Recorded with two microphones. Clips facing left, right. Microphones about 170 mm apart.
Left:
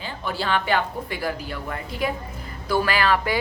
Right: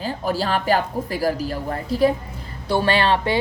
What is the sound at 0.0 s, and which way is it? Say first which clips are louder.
A woman's voice: right 5 dB; 40° right (ahead or behind).